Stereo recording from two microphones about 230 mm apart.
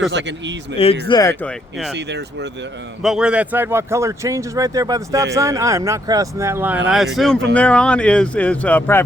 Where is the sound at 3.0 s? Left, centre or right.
Centre.